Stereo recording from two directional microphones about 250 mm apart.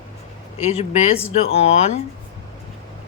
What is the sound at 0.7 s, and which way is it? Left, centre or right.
Speech, left.